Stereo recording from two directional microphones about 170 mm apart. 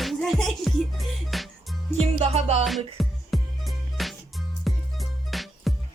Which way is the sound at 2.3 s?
40° right (ahead or behind).